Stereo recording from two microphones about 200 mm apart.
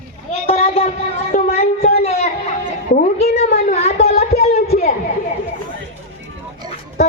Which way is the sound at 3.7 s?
30° left (ahead or behind).